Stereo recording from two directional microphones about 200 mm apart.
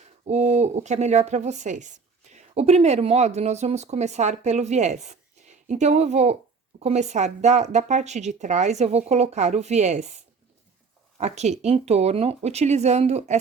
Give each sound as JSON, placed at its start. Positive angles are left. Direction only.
{"t": 0.3, "sound": "speech", "side_deg": -35}
{"t": 11.2, "sound": "speech", "side_deg": -35}